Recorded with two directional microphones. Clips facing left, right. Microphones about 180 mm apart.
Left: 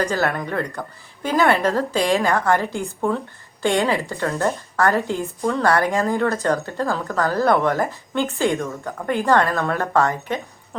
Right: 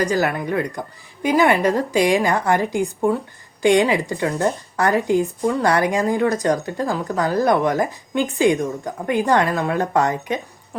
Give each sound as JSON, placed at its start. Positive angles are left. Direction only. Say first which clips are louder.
{"t": 0.0, "sound": "speech", "louder": "right 2 dB", "side_deg": -15}